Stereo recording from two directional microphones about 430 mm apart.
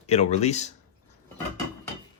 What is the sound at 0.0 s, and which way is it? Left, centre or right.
Speech, centre.